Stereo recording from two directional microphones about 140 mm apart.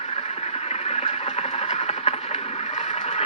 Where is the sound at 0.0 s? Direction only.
50° left (ahead or behind).